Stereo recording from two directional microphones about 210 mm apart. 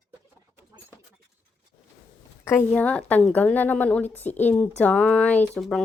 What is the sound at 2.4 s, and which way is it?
A woman's voice, 10° left (ahead or behind).